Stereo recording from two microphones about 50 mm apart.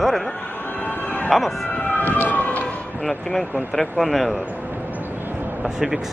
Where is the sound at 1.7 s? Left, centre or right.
Left.